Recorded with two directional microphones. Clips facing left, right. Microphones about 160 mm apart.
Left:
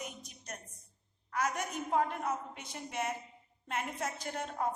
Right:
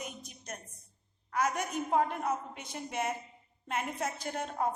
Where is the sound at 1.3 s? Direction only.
20° right (ahead or behind).